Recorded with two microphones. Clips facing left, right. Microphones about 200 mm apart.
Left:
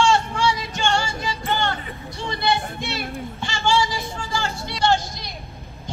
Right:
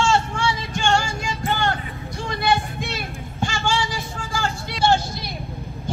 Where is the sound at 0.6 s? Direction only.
50° right (ahead or behind).